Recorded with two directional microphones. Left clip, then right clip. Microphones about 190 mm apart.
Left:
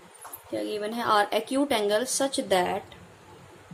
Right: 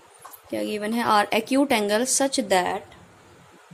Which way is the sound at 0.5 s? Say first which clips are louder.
Right 3 dB; 40° right (ahead or behind).